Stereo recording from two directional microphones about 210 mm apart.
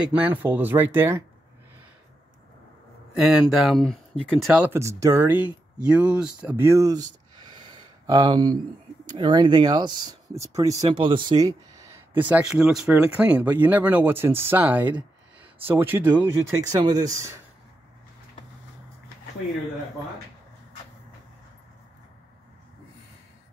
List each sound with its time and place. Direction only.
0.2 s speech: 10° right (ahead or behind)
3.2 s speech: 5° right (ahead or behind)
7.5 s a sound: 20° right (ahead or behind)
9.1 s speech: 20° right (ahead or behind)